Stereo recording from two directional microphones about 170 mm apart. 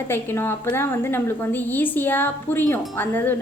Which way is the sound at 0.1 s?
15° left (ahead or behind).